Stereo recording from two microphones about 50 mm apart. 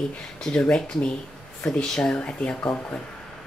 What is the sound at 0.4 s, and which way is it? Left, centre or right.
Speech, centre.